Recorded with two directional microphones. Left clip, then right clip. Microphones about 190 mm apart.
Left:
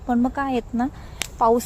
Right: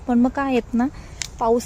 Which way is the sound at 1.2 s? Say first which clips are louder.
Left 1 dB; 5° right (ahead or behind).